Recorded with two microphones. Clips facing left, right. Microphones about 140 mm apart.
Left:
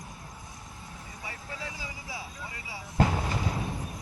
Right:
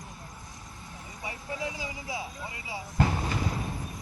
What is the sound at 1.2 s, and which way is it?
Vehicle, 20° right (ahead or behind).